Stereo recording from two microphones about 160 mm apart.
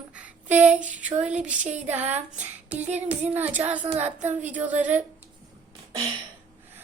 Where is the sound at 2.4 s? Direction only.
10° right (ahead or behind).